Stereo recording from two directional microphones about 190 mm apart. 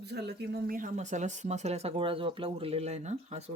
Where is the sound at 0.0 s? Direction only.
60° right (ahead or behind).